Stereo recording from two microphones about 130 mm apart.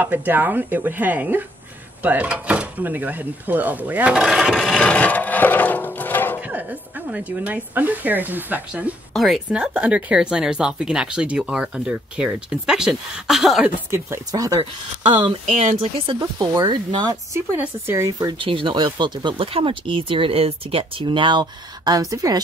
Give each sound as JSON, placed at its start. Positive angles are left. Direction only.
{"t": 0.0, "sound": "speech", "side_deg": -15}
{"t": 6.5, "sound": "speech", "side_deg": -10}
{"t": 9.1, "sound": "speech", "side_deg": 0}
{"t": 13.8, "sound": "speech", "side_deg": -20}
{"t": 15.4, "sound": "speech", "side_deg": -60}
{"t": 16.3, "sound": "speech", "side_deg": -35}
{"t": 17.6, "sound": "speech", "side_deg": -20}
{"t": 18.4, "sound": "speech", "side_deg": -40}